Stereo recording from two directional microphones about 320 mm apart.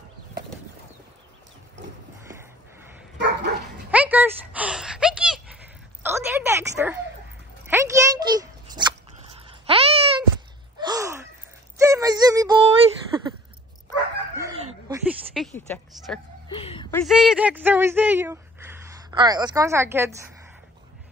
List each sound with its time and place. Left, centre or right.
3.2 s dog: right
3.9 s a sound: centre
10.8 s gasp: centre
11.8 s music: centre
14.6 s dog: centre
15.3 s a sound: centre
17.0 s speech: centre